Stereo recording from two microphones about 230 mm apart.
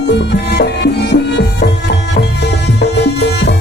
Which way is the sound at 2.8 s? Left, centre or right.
Left.